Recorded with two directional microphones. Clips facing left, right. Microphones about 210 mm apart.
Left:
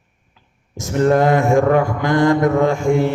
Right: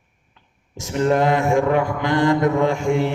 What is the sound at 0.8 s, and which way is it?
Mantra, 45° left (ahead or behind).